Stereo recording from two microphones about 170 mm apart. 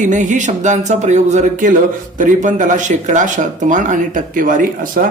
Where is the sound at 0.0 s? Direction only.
45° right (ahead or behind).